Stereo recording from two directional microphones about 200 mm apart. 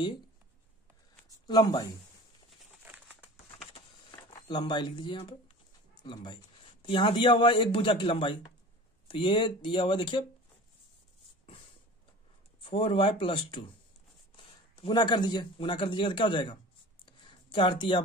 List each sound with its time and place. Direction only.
1.5 s speech: 20° left (ahead or behind)
2.9 s crumpling: 5° right (ahead or behind)
4.3 s speech: 25° left (ahead or behind)
12.5 s speech: 25° left (ahead or behind)
17.0 s a sound: 25° left (ahead or behind)